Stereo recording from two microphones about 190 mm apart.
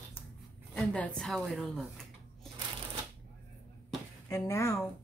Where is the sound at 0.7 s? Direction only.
5° left (ahead or behind).